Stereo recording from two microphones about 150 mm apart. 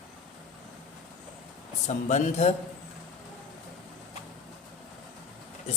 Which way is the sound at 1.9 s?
50° left (ahead or behind).